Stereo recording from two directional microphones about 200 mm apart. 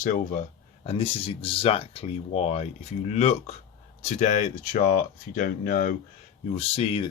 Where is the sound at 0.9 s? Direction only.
30° left (ahead or behind).